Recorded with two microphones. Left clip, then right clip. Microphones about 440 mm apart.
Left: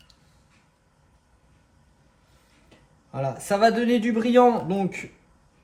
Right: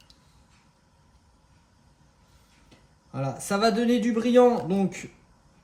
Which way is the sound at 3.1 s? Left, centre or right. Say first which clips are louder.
Left 4 dB; centre.